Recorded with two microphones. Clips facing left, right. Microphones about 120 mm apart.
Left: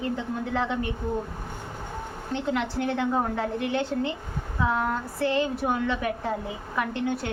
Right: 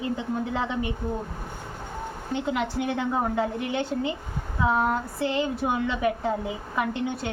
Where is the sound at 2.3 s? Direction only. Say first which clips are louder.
Even; 15° right (ahead or behind).